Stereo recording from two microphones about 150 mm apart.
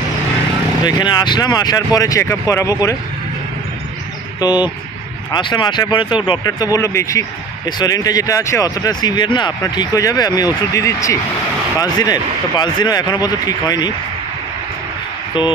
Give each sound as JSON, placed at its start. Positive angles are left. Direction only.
{"t": 0.8, "sound": "speech", "side_deg": 30}
{"t": 4.4, "sound": "speech", "side_deg": 25}
{"t": 15.3, "sound": "a sound", "side_deg": 30}